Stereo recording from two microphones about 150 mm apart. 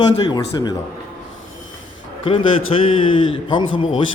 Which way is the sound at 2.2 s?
35° left (ahead or behind).